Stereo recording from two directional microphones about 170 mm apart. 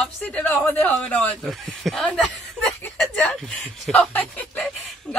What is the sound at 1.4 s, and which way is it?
Chuckle, centre (ahead or behind).